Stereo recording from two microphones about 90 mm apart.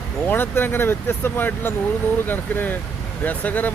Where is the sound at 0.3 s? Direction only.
25° left (ahead or behind).